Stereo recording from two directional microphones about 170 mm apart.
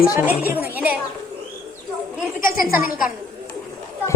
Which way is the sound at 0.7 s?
10° right (ahead or behind).